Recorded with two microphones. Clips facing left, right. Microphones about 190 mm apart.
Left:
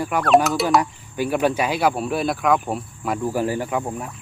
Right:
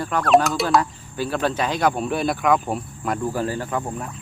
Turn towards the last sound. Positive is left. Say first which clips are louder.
# left 2 dB
turn(degrees=5)  # may be behind; listen again after turning